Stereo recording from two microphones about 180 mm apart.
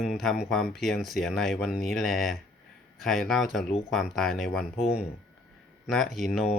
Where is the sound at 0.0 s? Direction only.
Centre (ahead or behind).